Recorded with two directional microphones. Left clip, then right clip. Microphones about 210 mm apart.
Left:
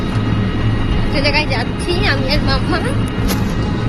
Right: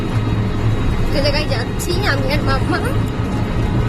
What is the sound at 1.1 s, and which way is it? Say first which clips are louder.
Speech: left 3 dB; 15° right (ahead or behind).